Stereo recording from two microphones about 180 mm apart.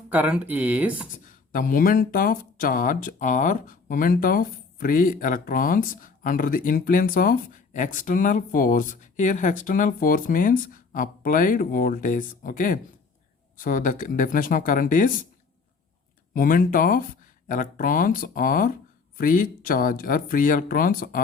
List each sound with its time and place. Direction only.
0.1 s speech: 5° right (ahead or behind)
1.1 s speech: 50° left (ahead or behind)
16.3 s speech: 50° left (ahead or behind)